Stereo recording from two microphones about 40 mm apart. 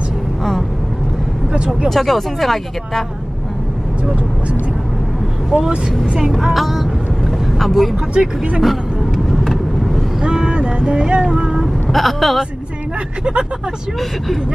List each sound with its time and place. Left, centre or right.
0.4 s vehicle: centre
1.9 s speech: centre
5.5 s speech: centre
6.5 s speech: centre
7.9 s speech: right
8.5 s vehicle: centre
10.2 s vehicle: right
11.9 s speech: centre
13.2 s speech: right